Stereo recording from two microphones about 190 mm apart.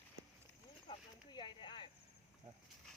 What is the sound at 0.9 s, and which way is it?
Snake, 25° left (ahead or behind).